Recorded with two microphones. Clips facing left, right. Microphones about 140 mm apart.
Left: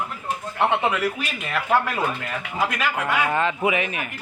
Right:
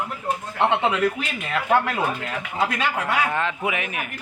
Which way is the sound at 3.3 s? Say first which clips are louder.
Left 3 dB; centre (ahead or behind).